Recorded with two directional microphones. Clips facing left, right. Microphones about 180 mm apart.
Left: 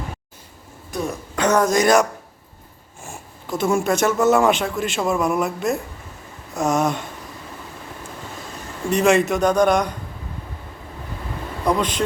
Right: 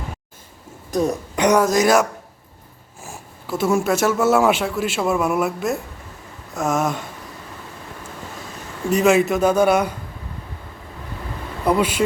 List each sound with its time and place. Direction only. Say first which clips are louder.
0.9 s speech: right 6 dB; 40° right (ahead or behind)
1.4 s speech: right 2 dB; 15° right (ahead or behind)
1.6 s speech: even; centre (ahead or behind)
8.9 s speech: right 1 dB; 5° right (ahead or behind)
11.6 s speech: right 2 dB; 5° right (ahead or behind)